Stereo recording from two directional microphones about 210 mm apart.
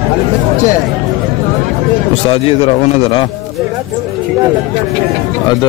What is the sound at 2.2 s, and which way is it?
A man's voice, 25° left (ahead or behind).